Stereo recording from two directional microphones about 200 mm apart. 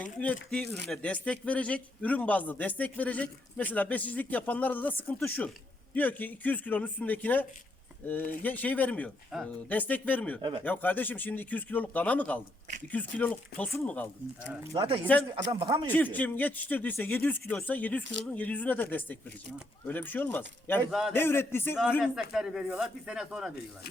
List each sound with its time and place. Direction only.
0.0 s a man's voice: 5° left (ahead or behind)
14.7 s a man's voice: 25° right (ahead or behind)
15.9 s a man's voice: 10° left (ahead or behind)
22.0 s speech: centre (ahead or behind)